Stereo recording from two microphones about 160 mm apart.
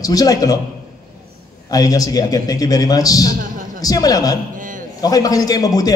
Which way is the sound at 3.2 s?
60° right (ahead or behind).